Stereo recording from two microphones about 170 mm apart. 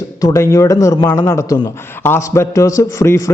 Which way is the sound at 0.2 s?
20° left (ahead or behind).